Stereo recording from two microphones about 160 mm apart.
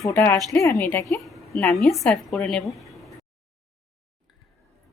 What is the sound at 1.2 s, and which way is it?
A woman's voice, centre (ahead or behind).